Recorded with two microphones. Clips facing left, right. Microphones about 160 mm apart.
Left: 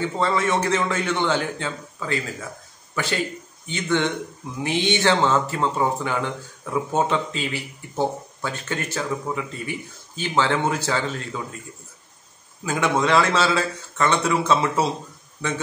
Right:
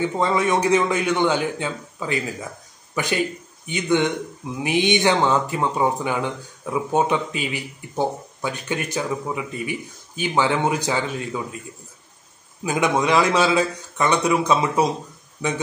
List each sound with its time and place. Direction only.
0.2 s speech: 15° right (ahead or behind)
2.9 s a sound: 15° right (ahead or behind)
3.6 s speech: 15° right (ahead or behind)
12.6 s speech: 15° right (ahead or behind)